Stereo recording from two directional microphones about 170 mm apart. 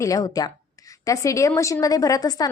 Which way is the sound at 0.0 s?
20° left (ahead or behind).